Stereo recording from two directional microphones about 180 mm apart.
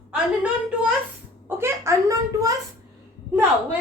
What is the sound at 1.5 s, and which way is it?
Speech, 15° right (ahead or behind).